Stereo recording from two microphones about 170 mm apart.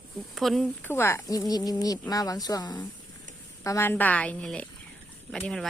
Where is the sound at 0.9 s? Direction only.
15° left (ahead or behind).